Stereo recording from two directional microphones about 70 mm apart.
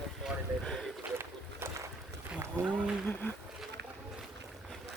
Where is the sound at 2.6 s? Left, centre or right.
Right.